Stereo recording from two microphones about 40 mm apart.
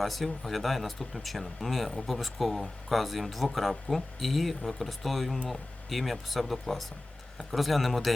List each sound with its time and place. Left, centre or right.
0.0 s speech: centre